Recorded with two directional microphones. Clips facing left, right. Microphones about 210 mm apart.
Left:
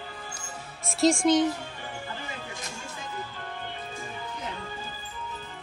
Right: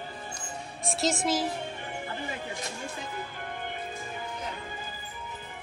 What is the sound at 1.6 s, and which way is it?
Music, 20° right (ahead or behind).